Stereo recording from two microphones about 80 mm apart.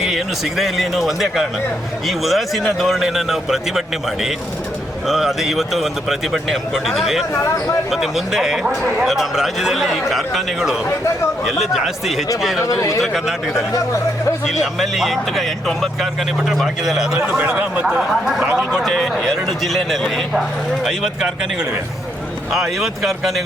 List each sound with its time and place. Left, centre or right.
0.0 s speech: centre
12.6 s speech: left
13.0 s speech: centre
17.2 s a man's voice: centre